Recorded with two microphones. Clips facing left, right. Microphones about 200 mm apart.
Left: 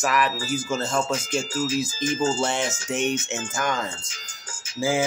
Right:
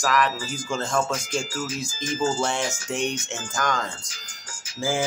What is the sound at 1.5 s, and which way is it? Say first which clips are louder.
Speech: left 5 dB; 25° left (ahead or behind).